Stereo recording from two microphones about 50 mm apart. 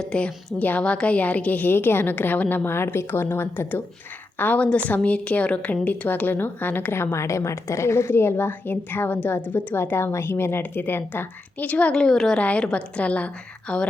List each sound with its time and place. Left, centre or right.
0.1 s a woman's voice: centre
1.7 s a woman's voice: left
2.6 s speech: left
4.4 s a woman's voice: left
6.9 s a woman's voice: left
10.6 s a woman's voice: left
11.6 s a woman's voice: left
11.9 s a woman's voice: centre
12.4 s a woman's voice: left